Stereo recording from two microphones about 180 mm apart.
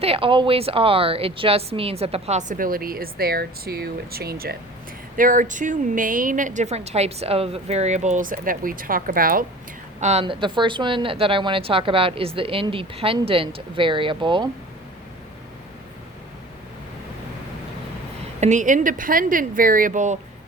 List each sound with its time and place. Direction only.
0.0 s a woman's voice: 30° right (ahead or behind); by 4.5 s 60° right (ahead or behind)
5.1 s a woman's voice: 50° right (ahead or behind)
10.0 s a woman's voice: 35° right (ahead or behind)
18.3 s a woman's voice: 40° right (ahead or behind)